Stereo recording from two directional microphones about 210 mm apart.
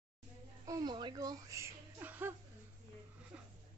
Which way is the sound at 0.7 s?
20° right (ahead or behind).